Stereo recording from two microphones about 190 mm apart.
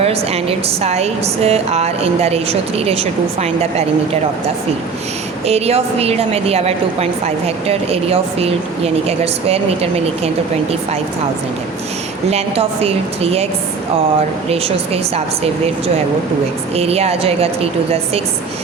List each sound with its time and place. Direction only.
0.0 s a woman's voice: 30° right (ahead or behind)
12.3 s a woman's voice: 30° right (ahead or behind)
14.5 s a woman's voice: 30° right (ahead or behind)
16.7 s a woman's voice: 30° right (ahead or behind)